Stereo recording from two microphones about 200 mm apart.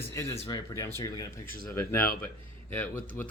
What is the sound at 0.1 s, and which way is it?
Speech, 15° left (ahead or behind).